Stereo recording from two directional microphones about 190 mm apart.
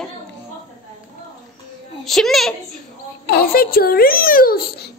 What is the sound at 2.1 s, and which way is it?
Speech, centre (ahead or behind).